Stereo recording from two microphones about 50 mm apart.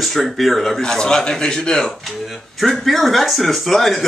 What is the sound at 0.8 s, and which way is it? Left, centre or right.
Speech, centre.